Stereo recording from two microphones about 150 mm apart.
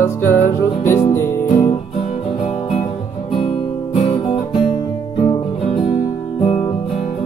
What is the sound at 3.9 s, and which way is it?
Guitar, 40° left (ahead or behind).